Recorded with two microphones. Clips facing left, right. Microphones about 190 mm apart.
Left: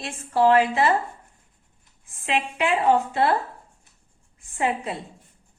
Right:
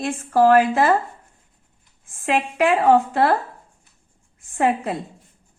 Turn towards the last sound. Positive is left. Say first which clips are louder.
# right 5 dB
turn(degrees=-55)  # may be behind; listen again after turning